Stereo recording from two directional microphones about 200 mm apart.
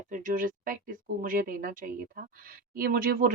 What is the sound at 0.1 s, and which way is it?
Speech, 40° right (ahead or behind).